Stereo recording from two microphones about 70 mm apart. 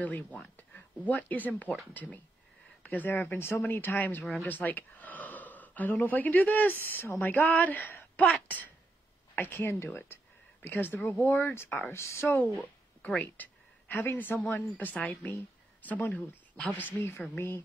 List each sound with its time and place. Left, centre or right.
0.0 s a woman's voice: left
12.4 s a woman's voice: left